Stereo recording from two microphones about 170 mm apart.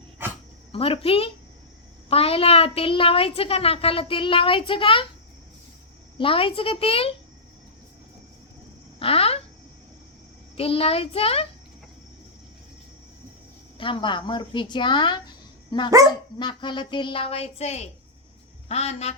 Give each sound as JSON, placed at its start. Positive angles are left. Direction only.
{"t": 0.7, "sound": "a woman's voice", "side_deg": 35}
{"t": 6.1, "sound": "a woman's voice", "side_deg": 30}
{"t": 9.0, "sound": "speech", "side_deg": 35}
{"t": 10.6, "sound": "a woman's voice", "side_deg": 35}
{"t": 13.7, "sound": "a woman's voice", "side_deg": 30}
{"t": 16.0, "sound": "speech", "side_deg": -20}
{"t": 16.4, "sound": "a woman's voice", "side_deg": 25}